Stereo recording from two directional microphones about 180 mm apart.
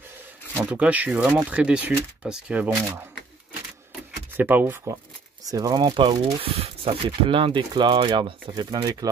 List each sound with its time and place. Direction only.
0.6 s speech: 5° right (ahead or behind)
4.4 s speech: 10° right (ahead or behind)